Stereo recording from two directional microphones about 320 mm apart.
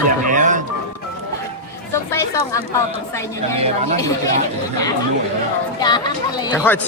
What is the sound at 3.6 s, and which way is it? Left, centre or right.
Speech, centre.